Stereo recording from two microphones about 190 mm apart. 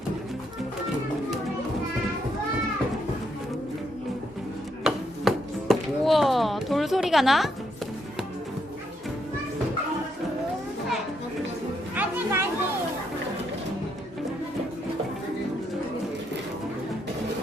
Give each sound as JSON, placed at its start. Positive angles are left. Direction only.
{"t": 4.9, "sound": "chop", "side_deg": 0}
{"t": 11.9, "sound": "music", "side_deg": -15}